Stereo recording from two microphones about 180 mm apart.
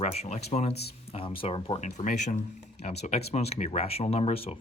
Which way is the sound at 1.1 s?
30° left (ahead or behind).